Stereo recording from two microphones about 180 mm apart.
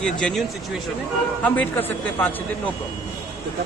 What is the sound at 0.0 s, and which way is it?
Speech, 5° left (ahead or behind).